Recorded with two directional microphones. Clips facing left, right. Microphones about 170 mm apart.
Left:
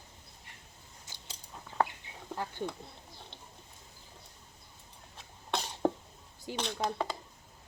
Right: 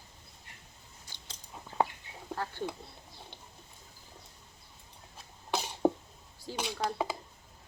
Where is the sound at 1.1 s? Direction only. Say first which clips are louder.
Left 2 dB; 20° left (ahead or behind).